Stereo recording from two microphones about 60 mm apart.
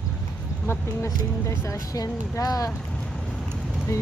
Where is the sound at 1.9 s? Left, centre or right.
Left.